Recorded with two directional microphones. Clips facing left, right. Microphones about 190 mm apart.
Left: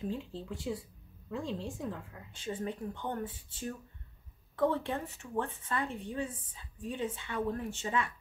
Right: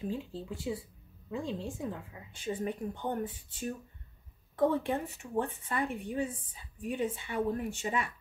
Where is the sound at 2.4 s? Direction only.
15° right (ahead or behind).